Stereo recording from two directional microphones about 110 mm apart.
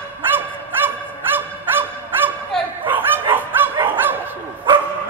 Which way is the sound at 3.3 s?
20° right (ahead or behind).